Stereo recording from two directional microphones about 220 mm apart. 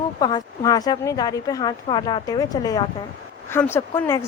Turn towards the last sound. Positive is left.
turn(degrees=10)  # may be behind; listen again after turning